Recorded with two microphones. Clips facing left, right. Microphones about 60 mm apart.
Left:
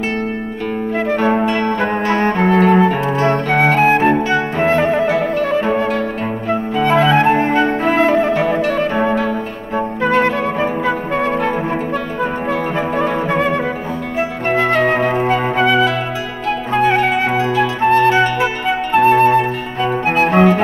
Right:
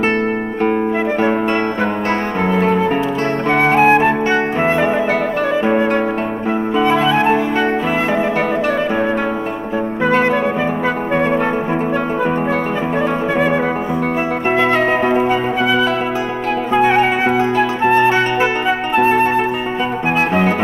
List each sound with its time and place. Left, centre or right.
2.7 s music: left
3.8 s flute: centre
4.3 s music: right
7.1 s music: centre
8.0 s music: centre
14.9 s flute: centre
15.6 s music: centre
16.8 s music: centre